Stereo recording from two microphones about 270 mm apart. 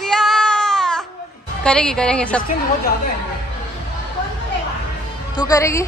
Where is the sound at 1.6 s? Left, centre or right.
Centre.